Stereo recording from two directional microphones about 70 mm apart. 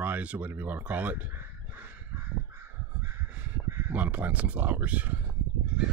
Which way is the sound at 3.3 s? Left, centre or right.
Right.